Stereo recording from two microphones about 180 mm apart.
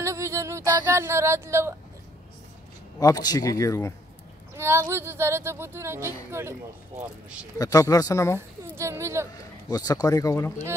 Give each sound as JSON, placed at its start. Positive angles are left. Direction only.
{"t": 0.0, "sound": "a sound", "side_deg": -15}
{"t": 3.0, "sound": "speech", "side_deg": 20}
{"t": 4.6, "sound": "speech", "side_deg": -15}
{"t": 7.5, "sound": "speech", "side_deg": 20}
{"t": 8.4, "sound": "speech", "side_deg": -15}
{"t": 9.3, "sound": "speech", "side_deg": 20}